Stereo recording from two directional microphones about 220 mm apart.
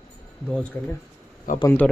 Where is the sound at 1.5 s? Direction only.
40° left (ahead or behind).